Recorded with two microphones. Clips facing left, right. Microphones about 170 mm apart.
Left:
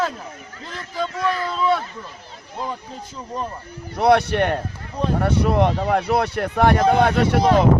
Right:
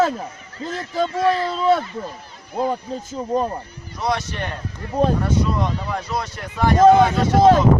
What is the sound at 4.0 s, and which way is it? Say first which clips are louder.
Speech: left 8 dB; 60° left (ahead or behind).